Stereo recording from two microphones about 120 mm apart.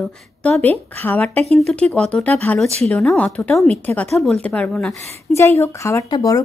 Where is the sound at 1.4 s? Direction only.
60° right (ahead or behind).